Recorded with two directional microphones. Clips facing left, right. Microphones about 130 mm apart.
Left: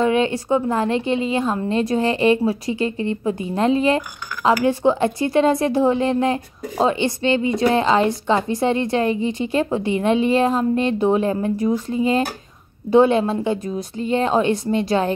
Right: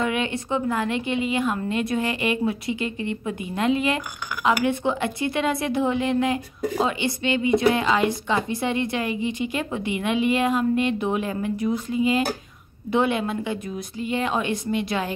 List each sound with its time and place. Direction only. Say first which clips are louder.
0.0 s a woman's voice: left 7 dB; 30° left (ahead or behind)
5.2 s a woman's voice: left 7 dB; 40° left (ahead or behind)